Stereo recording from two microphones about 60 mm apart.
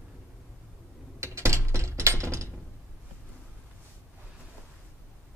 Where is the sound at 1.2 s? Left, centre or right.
Right.